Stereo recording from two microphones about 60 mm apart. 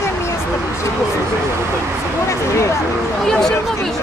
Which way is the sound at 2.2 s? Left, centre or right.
Left.